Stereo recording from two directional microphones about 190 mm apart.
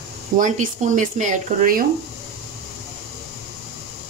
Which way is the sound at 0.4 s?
40° right (ahead or behind).